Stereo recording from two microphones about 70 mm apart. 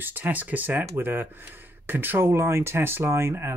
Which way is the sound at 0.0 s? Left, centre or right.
Right.